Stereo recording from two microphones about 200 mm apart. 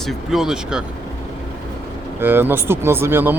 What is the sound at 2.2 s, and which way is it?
Speech, 10° right (ahead or behind).